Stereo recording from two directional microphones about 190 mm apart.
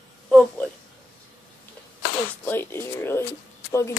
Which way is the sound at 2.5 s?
10° left (ahead or behind).